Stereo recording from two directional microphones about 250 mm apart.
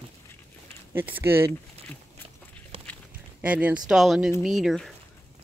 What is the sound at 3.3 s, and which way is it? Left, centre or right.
Speech, centre.